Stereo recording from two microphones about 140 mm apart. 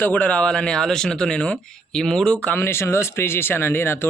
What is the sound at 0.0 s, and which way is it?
A man's voice, 10° left (ahead or behind).